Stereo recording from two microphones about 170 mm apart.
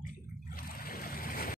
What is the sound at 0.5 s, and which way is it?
Boat, 60° left (ahead or behind).